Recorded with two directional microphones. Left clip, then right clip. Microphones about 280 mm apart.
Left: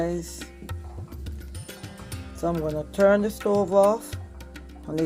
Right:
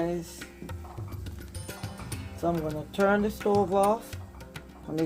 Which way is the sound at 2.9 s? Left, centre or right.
Left.